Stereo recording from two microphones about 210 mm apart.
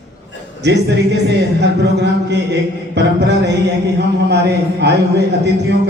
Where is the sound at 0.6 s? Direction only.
55° right (ahead or behind).